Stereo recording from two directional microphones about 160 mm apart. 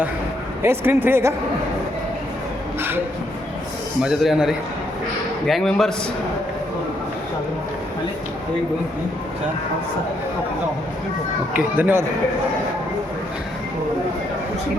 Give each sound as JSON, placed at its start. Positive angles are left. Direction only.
{"t": 0.6, "sound": "speech", "side_deg": -15}
{"t": 4.0, "sound": "a man's voice", "side_deg": 0}
{"t": 11.5, "sound": "speech", "side_deg": -10}